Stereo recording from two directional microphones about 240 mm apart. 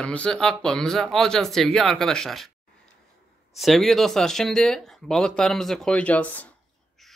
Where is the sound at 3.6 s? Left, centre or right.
Centre.